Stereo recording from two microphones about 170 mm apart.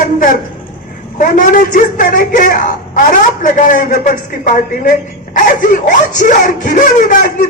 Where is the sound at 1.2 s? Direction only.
50° left (ahead or behind).